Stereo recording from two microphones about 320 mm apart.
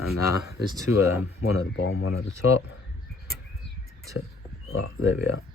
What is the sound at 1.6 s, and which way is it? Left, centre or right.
Speech, left.